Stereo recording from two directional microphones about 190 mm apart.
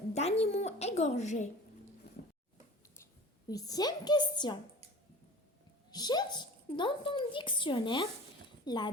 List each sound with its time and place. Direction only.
0.1 s a woman's voice: 35° left (ahead or behind)
3.5 s speech: 20° left (ahead or behind)
5.9 s speech: 20° left (ahead or behind)